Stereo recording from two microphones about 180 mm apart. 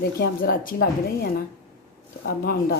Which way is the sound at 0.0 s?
55° left (ahead or behind).